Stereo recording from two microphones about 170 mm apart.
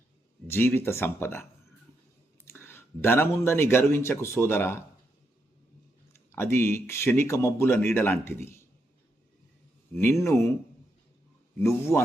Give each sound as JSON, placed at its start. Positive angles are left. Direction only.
{"t": 0.4, "sound": "speech", "side_deg": 15}
{"t": 2.5, "sound": "a man's voice", "side_deg": 15}
{"t": 6.3, "sound": "speech", "side_deg": 15}
{"t": 10.0, "sound": "speech", "side_deg": 15}
{"t": 11.6, "sound": "speech", "side_deg": 15}